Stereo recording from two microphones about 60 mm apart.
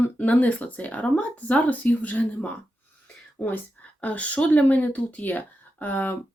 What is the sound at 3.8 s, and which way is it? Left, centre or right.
Speech, left.